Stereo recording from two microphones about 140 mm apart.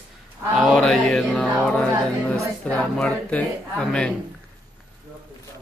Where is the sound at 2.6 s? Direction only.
10° left (ahead or behind).